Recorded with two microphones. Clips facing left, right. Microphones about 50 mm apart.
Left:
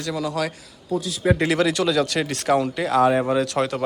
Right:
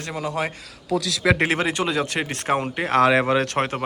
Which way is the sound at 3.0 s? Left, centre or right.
Right.